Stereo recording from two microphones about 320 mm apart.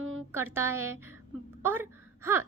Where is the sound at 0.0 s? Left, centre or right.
Right.